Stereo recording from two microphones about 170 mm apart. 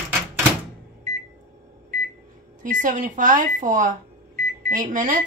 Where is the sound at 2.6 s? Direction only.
50° right (ahead or behind).